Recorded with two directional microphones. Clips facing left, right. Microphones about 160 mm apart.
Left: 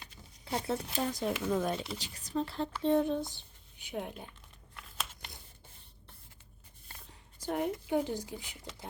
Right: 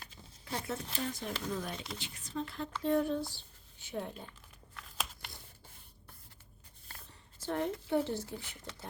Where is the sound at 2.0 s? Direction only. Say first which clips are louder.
Left 5 dB; 40° left (ahead or behind).